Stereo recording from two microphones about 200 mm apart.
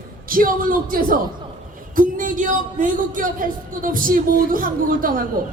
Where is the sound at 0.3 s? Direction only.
45° right (ahead or behind).